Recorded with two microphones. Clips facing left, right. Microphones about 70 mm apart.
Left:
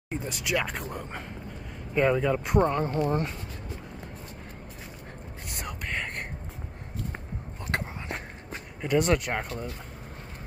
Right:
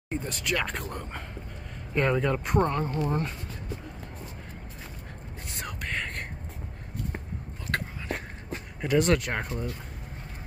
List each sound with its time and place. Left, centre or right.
0.1 s speech: centre
2.6 s speech: centre
5.6 s whispering: centre
8.8 s speech: centre